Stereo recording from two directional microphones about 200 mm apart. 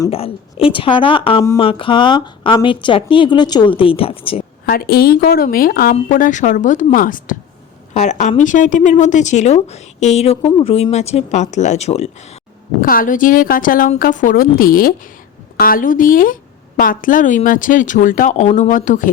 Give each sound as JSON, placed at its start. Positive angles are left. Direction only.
{"t": 0.1, "sound": "a woman's voice", "side_deg": 30}
{"t": 4.6, "sound": "a woman's voice", "side_deg": 50}
{"t": 12.8, "sound": "a woman's voice", "side_deg": 45}